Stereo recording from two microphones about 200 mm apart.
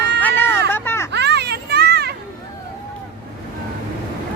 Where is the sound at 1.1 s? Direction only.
60° right (ahead or behind).